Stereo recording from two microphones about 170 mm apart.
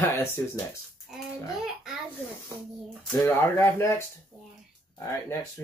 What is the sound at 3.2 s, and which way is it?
Speech, 15° left (ahead or behind).